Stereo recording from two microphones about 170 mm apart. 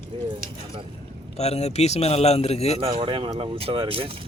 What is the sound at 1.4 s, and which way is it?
A man's voice, 40° left (ahead or behind).